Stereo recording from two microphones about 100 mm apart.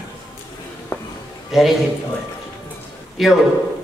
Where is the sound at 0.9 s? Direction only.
25° left (ahead or behind).